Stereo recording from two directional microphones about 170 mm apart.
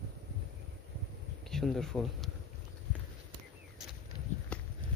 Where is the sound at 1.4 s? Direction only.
Centre (ahead or behind).